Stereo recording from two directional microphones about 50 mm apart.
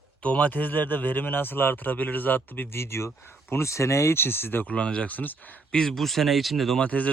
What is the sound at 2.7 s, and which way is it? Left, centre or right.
Speech, left.